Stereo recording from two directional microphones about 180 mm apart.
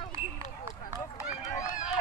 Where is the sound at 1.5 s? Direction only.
45° left (ahead or behind).